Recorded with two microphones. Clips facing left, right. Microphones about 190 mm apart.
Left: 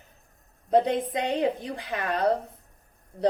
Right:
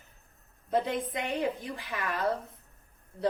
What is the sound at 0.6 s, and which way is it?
A woman's voice, 20° left (ahead or behind).